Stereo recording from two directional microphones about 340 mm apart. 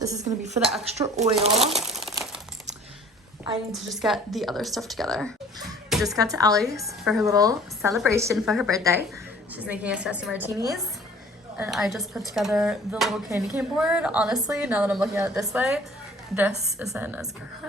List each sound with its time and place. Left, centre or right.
0.3 s speech: centre
1.4 s speech: centre
3.5 s a woman's voice: centre